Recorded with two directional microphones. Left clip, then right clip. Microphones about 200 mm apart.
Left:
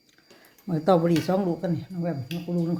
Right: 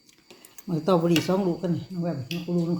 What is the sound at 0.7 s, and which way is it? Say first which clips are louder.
Speech: left 1 dB; 30° left (ahead or behind).